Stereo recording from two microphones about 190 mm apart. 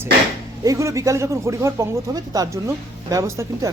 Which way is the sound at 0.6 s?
15° right (ahead or behind).